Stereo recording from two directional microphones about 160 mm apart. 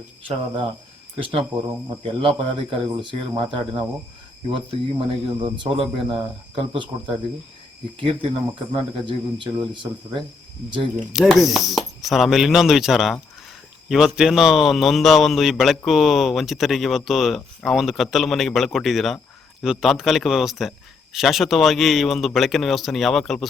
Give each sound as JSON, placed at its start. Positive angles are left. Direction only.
{"t": 0.2, "sound": "speech", "side_deg": -35}
{"t": 7.9, "sound": "speech", "side_deg": -35}
{"t": 11.1, "sound": "a man's voice", "side_deg": 0}